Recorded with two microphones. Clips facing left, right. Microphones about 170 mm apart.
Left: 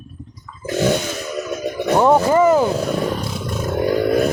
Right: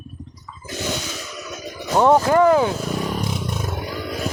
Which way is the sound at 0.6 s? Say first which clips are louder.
Left 10 dB; 60° left (ahead or behind).